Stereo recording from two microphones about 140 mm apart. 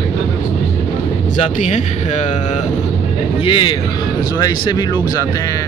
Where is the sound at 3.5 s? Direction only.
35° left (ahead or behind).